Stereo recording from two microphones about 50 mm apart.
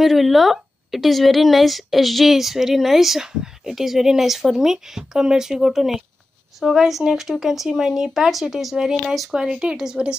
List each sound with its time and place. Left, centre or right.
0.0 s speech: centre
9.3 s a woman's voice: centre